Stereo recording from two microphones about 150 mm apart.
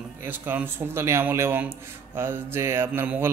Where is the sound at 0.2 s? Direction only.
15° right (ahead or behind).